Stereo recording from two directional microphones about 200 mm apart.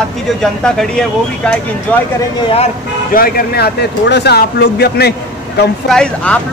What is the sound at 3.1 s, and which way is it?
Speech, 50° left (ahead or behind).